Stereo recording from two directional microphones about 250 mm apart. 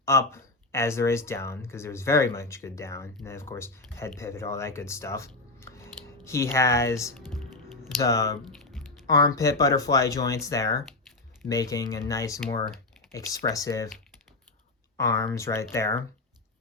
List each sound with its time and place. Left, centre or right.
0.0 s speech: centre
14.9 s speech: centre